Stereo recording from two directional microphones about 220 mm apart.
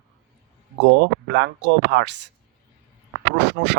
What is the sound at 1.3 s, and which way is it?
Speech, 50° right (ahead or behind).